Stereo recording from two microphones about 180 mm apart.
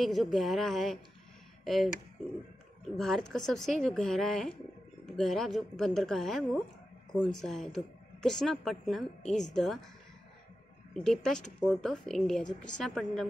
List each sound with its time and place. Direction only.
0.0 s a woman's voice: centre (ahead or behind)
3.0 s a woman's voice: 5° left (ahead or behind)
10.9 s a woman's voice: 5° left (ahead or behind)